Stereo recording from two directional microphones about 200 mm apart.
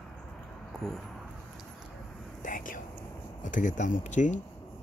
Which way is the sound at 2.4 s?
40° left (ahead or behind).